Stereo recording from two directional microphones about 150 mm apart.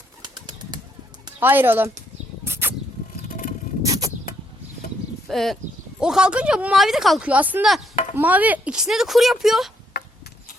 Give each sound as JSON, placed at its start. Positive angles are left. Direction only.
{"t": 0.2, "sound": "bird", "side_deg": -30}
{"t": 1.4, "sound": "speech", "side_deg": -15}
{"t": 2.4, "sound": "a sound", "side_deg": -15}
{"t": 3.2, "sound": "vehicle", "side_deg": 65}
{"t": 3.8, "sound": "a sound", "side_deg": -25}
{"t": 5.3, "sound": "speech", "side_deg": 0}
{"t": 10.0, "sound": "insect", "side_deg": 90}